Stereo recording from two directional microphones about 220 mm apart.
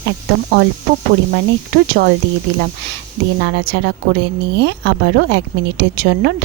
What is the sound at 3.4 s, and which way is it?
Speech, 50° right (ahead or behind).